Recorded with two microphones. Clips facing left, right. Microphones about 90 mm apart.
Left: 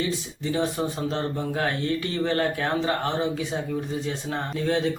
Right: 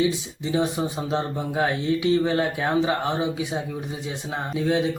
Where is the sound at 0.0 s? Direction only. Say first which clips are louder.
Right 4 dB; 15° right (ahead or behind).